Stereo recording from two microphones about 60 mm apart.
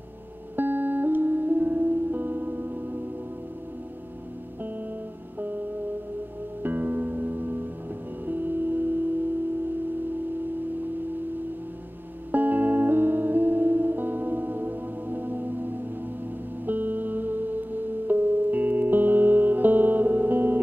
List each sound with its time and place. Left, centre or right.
0.6 s music: right
6.6 s music: right
12.3 s music: right